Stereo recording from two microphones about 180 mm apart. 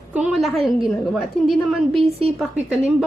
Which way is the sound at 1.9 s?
30° right (ahead or behind).